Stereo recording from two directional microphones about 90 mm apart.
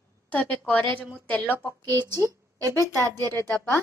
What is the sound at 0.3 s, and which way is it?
Speech, 15° left (ahead or behind).